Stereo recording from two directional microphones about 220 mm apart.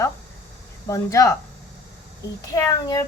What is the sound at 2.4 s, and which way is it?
Speech, 15° left (ahead or behind).